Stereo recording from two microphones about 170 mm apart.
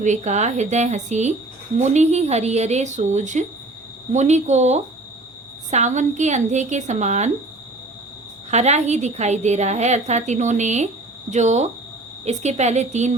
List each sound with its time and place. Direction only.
0.0 s a woman's voice: 45° right (ahead or behind)
8.4 s a woman's voice: 40° right (ahead or behind)